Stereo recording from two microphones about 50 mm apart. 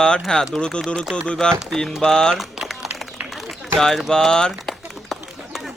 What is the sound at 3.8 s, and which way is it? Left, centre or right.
Speech, centre.